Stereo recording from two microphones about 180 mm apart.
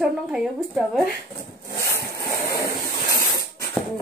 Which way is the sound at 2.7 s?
55° left (ahead or behind).